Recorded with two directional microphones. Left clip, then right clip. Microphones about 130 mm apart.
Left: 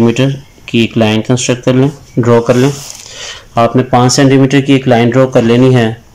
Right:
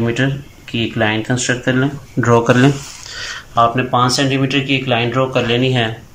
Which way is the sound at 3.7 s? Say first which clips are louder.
Left 5 dB; 50° left (ahead or behind).